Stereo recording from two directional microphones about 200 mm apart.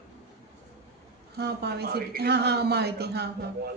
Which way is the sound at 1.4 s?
55° right (ahead or behind).